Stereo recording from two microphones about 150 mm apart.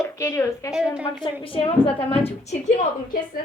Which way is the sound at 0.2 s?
20° left (ahead or behind).